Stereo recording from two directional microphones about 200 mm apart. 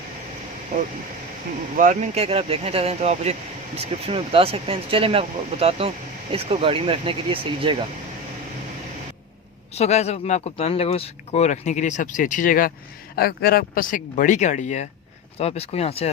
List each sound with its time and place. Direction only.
1.7 s speech: 40° right (ahead or behind)
9.7 s speech: 35° left (ahead or behind)